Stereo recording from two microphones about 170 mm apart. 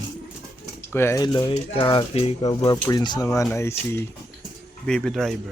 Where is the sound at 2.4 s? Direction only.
25° left (ahead or behind).